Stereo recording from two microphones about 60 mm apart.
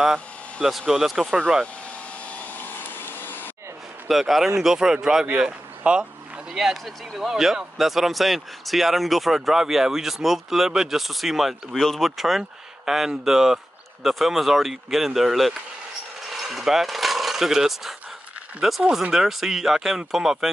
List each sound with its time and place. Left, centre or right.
0.7 s speech: centre
2.3 s vacuum cleaner: left
4.1 s speech: centre
16.3 s a sound: centre
18.8 s speech: centre